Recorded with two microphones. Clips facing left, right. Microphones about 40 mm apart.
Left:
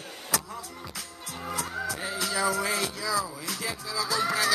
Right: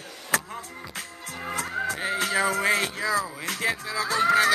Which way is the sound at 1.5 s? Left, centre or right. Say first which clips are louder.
Right 4 dB; right.